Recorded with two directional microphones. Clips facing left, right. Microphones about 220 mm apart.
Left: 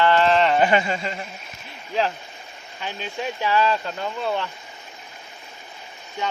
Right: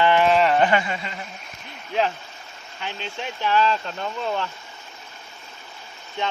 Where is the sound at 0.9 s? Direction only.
30° left (ahead or behind).